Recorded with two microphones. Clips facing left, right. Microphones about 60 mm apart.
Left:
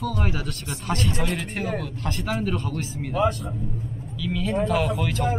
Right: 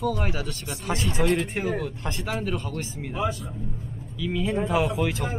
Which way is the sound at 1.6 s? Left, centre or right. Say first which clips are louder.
Right 1 dB; centre.